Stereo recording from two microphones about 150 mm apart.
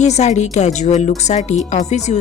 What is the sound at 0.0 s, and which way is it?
A woman's voice, 50° left (ahead or behind).